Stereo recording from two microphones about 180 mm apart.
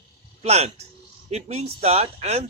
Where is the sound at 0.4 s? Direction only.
35° right (ahead or behind).